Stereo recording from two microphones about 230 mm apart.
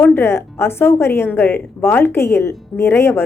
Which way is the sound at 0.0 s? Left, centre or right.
Centre.